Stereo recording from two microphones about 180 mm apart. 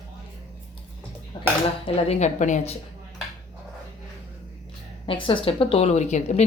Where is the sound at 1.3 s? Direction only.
25° left (ahead or behind).